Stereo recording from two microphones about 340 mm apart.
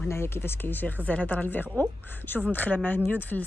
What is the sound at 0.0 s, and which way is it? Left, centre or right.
A woman's voice, centre.